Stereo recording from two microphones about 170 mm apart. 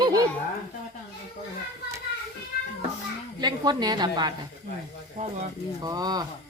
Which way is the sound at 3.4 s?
25° right (ahead or behind).